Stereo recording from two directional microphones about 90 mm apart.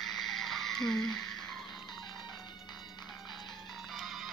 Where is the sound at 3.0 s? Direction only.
Centre (ahead or behind).